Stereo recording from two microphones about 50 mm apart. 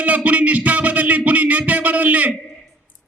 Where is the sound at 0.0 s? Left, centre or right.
Right.